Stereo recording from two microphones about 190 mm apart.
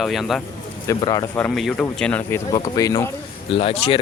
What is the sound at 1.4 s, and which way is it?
Speech, 10° left (ahead or behind).